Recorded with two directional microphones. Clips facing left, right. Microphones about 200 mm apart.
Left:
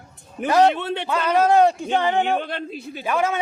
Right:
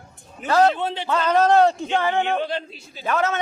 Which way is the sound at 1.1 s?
10° left (ahead or behind).